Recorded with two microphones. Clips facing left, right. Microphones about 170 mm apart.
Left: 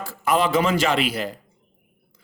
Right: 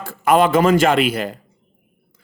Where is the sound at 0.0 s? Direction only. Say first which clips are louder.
Right 6 dB; 55° right (ahead or behind).